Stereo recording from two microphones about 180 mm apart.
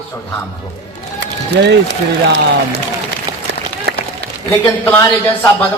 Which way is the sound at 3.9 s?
65° right (ahead or behind).